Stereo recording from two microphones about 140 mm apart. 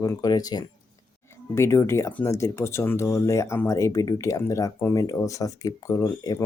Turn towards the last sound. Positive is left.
turn(degrees=25)  # may be behind; listen again after turning